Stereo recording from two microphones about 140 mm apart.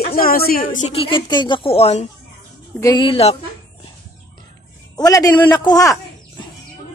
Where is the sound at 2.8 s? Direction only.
35° left (ahead or behind).